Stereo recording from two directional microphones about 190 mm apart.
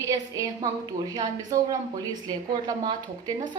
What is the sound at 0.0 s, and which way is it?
A woman's voice, 20° right (ahead or behind).